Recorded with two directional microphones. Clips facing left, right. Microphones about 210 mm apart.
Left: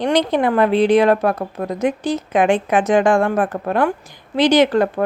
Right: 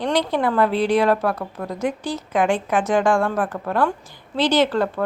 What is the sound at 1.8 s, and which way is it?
A woman's voice, 20° left (ahead or behind).